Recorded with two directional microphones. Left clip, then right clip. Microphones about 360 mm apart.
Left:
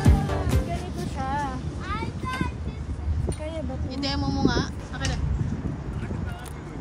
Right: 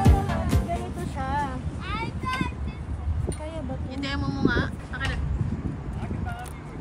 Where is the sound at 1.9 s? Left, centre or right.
Centre.